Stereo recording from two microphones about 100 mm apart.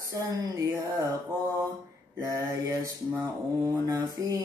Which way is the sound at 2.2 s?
35° right (ahead or behind).